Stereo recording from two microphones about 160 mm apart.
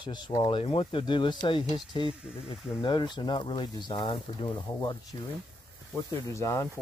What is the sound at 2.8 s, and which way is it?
Speech, 30° left (ahead or behind).